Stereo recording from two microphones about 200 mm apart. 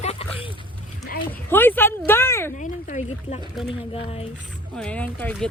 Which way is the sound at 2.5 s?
40° left (ahead or behind).